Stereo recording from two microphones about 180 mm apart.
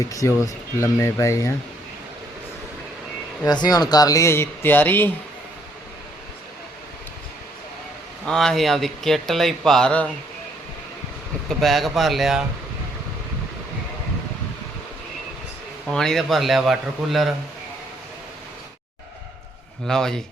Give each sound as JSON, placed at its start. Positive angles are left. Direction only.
{"t": 0.0, "sound": "speech", "side_deg": 20}
{"t": 3.4, "sound": "speech", "side_deg": 20}
{"t": 8.2, "sound": "speech", "side_deg": 0}
{"t": 11.4, "sound": "speech", "side_deg": 0}
{"t": 15.9, "sound": "speech", "side_deg": 5}
{"t": 19.9, "sound": "speech", "side_deg": 5}